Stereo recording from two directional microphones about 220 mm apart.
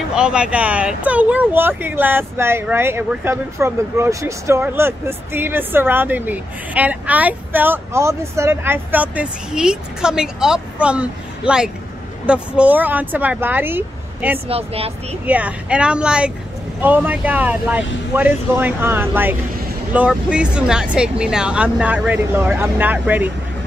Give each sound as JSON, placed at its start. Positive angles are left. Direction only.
{"t": 0.1, "sound": "speech", "side_deg": -5}
{"t": 14.5, "sound": "speech", "side_deg": -25}
{"t": 15.2, "sound": "speech", "side_deg": -5}